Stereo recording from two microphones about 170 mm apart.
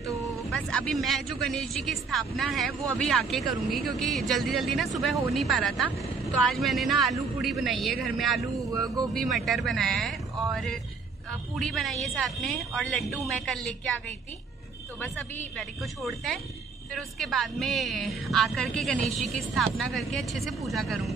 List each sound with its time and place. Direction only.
0.0 s vehicle: 20° right (ahead or behind)
0.5 s a woman's voice: 5° left (ahead or behind)
8.4 s speech: 20° right (ahead or behind)
9.1 s a woman's voice: centre (ahead or behind)
15.0 s a woman's voice: 10° left (ahead or behind)